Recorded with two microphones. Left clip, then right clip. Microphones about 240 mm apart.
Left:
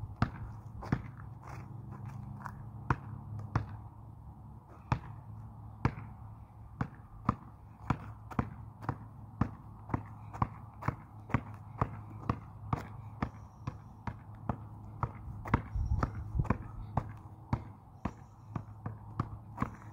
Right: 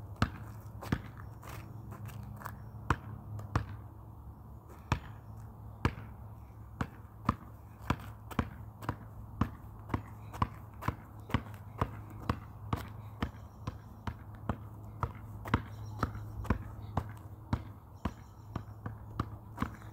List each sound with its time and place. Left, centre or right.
0.2 s basketball bounce: centre
0.8 s walk: centre
1.4 s biting: centre
4.9 s basketball bounce: centre
7.8 s a sound: centre
9.4 s walk: centre
17.5 s basketball bounce: centre
19.1 s a sound: centre